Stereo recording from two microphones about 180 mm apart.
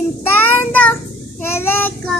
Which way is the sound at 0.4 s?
10° left (ahead or behind).